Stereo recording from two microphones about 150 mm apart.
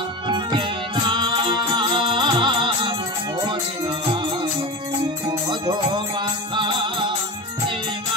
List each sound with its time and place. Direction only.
0.3 s music: 30° right (ahead or behind)
5.5 s music: 30° right (ahead or behind)